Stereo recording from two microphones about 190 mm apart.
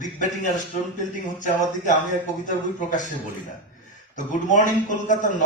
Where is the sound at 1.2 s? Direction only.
40° left (ahead or behind).